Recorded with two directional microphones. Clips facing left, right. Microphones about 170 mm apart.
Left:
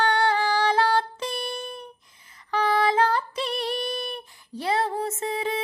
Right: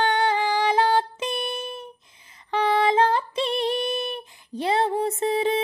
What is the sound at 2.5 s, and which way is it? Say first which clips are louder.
Female singing: right 2 dB; 25° right (ahead or behind).